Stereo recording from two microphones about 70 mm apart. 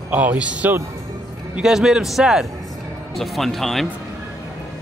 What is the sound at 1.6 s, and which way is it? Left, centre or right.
A man's voice, centre.